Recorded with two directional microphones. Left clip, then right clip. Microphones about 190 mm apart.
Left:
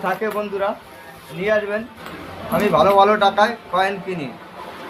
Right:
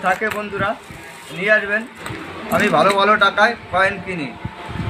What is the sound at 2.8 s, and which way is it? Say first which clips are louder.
Speech: left 2 dB; 30° left (ahead or behind).